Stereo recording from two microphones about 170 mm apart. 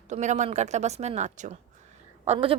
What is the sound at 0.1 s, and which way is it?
A woman's voice, 45° right (ahead or behind).